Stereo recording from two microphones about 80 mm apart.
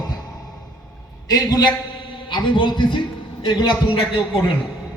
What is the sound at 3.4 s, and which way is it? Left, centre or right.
Speech, left.